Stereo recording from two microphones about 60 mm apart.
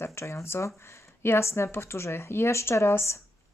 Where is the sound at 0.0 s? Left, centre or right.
Left.